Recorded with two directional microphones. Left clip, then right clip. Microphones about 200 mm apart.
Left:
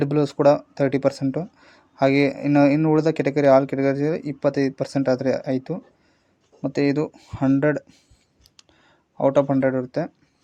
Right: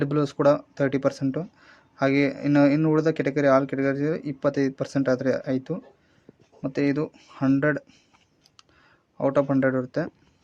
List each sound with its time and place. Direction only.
0.0 s speech: 10° left (ahead or behind)
9.1 s speech: 10° left (ahead or behind)
9.5 s speech: centre (ahead or behind)